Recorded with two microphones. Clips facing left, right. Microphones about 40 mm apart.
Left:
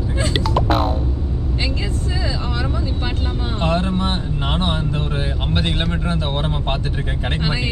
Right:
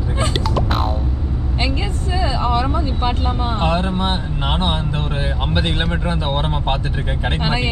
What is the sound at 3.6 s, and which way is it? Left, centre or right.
Vehicle, centre.